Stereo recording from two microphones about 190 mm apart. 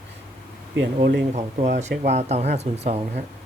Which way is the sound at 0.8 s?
85° right.